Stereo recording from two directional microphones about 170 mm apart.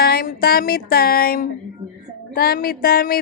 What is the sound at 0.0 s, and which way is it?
Speech, 65° left (ahead or behind).